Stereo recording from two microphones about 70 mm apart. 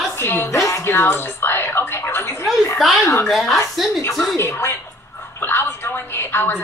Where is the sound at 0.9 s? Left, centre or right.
Left.